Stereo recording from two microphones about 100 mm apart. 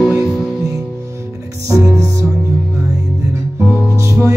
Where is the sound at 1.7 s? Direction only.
30° right (ahead or behind).